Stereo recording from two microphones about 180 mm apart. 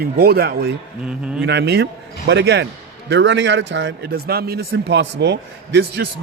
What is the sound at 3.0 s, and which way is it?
A man's voice, 85° right.